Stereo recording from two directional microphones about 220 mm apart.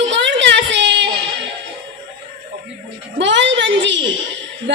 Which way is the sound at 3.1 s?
55° right (ahead or behind).